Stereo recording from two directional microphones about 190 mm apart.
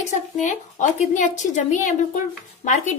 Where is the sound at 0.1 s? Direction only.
40° left (ahead or behind).